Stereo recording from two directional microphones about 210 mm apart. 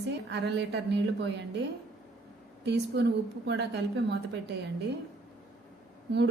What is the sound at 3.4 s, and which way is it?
A woman's voice, 55° right (ahead or behind).